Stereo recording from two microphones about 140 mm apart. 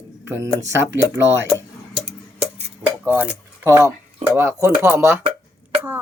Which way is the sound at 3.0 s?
15° right (ahead or behind).